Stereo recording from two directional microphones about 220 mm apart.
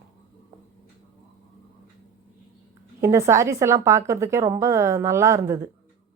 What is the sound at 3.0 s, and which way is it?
Speech, 15° right (ahead or behind).